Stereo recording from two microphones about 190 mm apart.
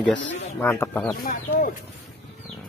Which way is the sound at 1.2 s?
50° left (ahead or behind).